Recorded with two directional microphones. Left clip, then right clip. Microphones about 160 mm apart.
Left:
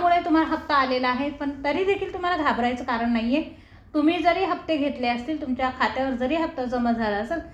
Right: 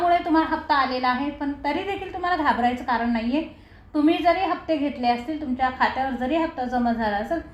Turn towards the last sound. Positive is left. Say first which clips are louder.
# right 1 dB
turn(degrees=35)  # may be behind; listen again after turning